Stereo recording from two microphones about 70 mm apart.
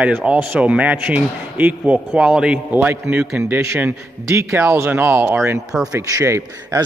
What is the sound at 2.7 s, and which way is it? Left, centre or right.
Speech, right.